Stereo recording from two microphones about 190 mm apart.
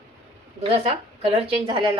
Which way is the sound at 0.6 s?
30° right (ahead or behind).